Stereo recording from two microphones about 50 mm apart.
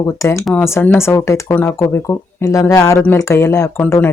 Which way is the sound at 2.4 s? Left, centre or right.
Left.